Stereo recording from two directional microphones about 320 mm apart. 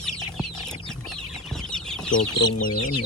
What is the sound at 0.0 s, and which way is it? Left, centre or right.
Chicken, centre.